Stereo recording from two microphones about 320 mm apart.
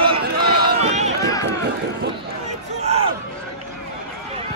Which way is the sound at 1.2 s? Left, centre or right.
Centre.